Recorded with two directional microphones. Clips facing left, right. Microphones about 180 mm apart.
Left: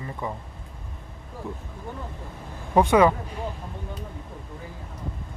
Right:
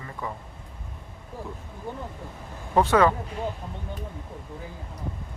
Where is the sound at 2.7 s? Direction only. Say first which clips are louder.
Left 2 dB; 15° left (ahead or behind).